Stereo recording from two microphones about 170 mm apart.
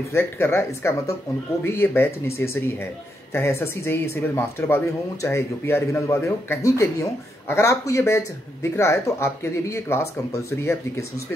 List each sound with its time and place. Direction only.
0.1 s speech: 15° left (ahead or behind)